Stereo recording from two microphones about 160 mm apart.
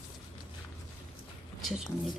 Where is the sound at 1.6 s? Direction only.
Centre (ahead or behind).